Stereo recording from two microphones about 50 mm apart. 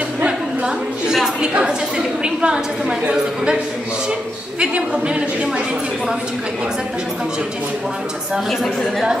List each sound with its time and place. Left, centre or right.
1.4 s a woman's voice: centre
4.6 s a woman's voice: centre